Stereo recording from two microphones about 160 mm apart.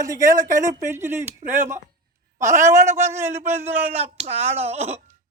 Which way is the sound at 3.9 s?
40° right (ahead or behind).